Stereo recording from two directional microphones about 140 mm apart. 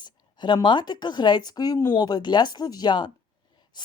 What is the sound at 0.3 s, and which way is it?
Speech, 30° left (ahead or behind).